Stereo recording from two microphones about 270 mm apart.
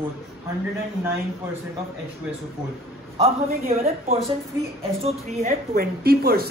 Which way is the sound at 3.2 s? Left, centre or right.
Right.